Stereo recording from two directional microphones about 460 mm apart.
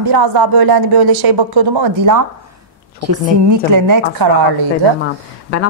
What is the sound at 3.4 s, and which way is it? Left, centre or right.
Speech, right.